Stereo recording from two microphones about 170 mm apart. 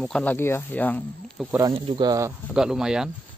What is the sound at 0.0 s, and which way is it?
Speech, 5° left (ahead or behind).